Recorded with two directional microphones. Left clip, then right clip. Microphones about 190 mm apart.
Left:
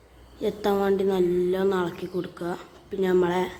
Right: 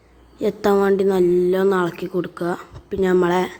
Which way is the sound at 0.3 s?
20° right (ahead or behind).